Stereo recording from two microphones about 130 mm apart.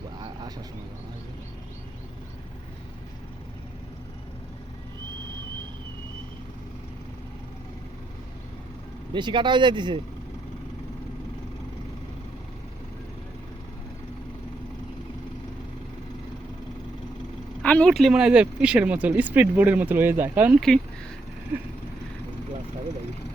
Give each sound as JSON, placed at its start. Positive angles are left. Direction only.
{"t": 9.1, "sound": "speech", "side_deg": -35}
{"t": 17.6, "sound": "speech", "side_deg": 10}